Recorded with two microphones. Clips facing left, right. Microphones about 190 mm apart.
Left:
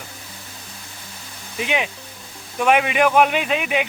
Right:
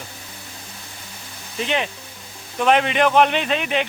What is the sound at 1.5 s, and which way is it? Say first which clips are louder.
Speech: even; 10° left (ahead or behind).